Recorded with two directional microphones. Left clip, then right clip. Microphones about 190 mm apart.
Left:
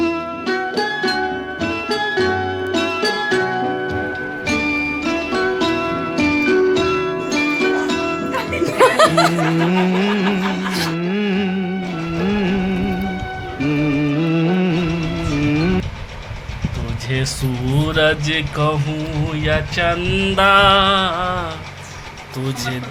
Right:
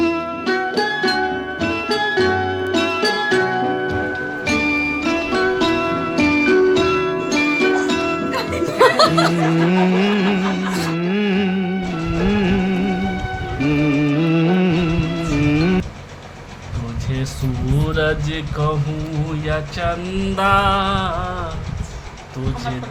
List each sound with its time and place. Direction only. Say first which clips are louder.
0.0 s music: right 1 dB; centre (ahead or behind)
8.8 s music: left 1 dB; 35° left (ahead or behind)
9.3 s music: even; centre (ahead or behind)
17.8 s music: left 4 dB; 20° left (ahead or behind)
19.5 s music: left 4 dB; 35° left (ahead or behind)